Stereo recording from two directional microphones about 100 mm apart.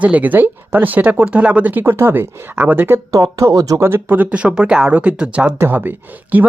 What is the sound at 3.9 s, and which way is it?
Speech, 20° right (ahead or behind).